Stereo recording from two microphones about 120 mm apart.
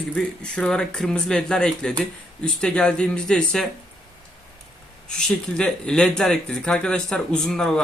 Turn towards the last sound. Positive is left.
turn(degrees=5)  # may be behind; listen again after turning